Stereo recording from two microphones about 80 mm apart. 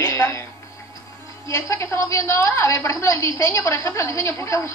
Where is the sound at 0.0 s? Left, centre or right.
Left.